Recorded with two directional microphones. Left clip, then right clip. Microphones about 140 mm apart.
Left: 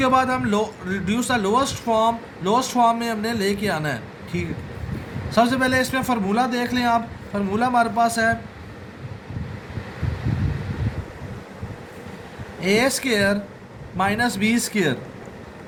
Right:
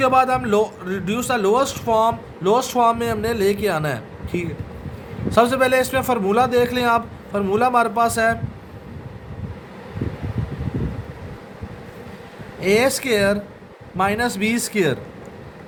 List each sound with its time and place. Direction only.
0.0 s a man's voice: 40° right (ahead or behind)
12.5 s a man's voice: 50° right (ahead or behind)